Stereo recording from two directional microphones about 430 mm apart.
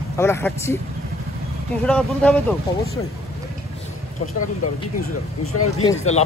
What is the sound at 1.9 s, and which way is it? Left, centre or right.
Speech, centre.